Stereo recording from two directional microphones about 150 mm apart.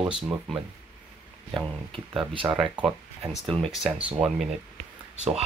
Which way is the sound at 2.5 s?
5° right (ahead or behind).